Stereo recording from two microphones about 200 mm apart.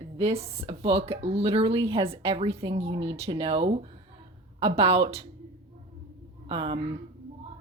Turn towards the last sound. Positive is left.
turn(degrees=-25)  # may be behind; listen again after turning